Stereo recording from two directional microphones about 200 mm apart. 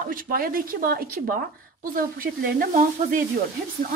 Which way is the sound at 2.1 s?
45° right (ahead or behind).